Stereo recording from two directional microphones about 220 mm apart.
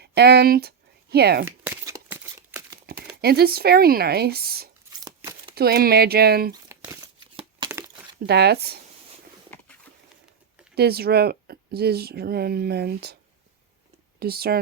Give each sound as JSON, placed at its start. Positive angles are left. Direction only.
{"t": 0.0, "sound": "speech", "side_deg": -50}
{"t": 1.5, "sound": "crumpling", "side_deg": -10}
{"t": 3.2, "sound": "speech", "side_deg": -45}
{"t": 4.9, "sound": "a sound", "side_deg": -15}
{"t": 5.5, "sound": "speech", "side_deg": -45}
{"t": 6.5, "sound": "crumpling", "side_deg": -15}
{"t": 7.6, "sound": "a sound", "side_deg": -20}
{"t": 8.3, "sound": "speech", "side_deg": -45}
{"t": 10.8, "sound": "speech", "side_deg": -45}
{"t": 14.2, "sound": "speech", "side_deg": -45}